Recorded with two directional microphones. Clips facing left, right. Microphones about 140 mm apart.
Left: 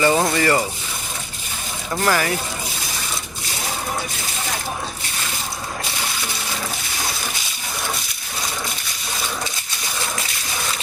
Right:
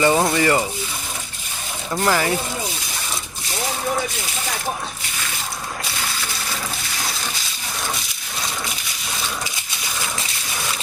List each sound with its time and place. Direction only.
0.0 s speech: 15° right (ahead or behind)
1.9 s speech: 15° right (ahead or behind)